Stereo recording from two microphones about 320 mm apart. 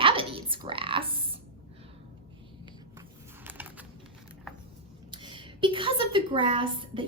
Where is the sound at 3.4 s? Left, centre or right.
Centre.